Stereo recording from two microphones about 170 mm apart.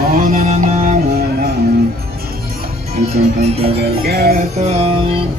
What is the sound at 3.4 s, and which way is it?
Music, 35° right (ahead or behind).